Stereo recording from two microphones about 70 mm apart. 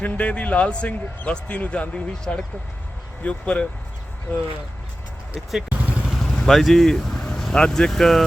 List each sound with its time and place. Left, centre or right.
0.0 s speech: left
5.3 s speech: centre
5.6 s vehicle: right
6.1 s speech: centre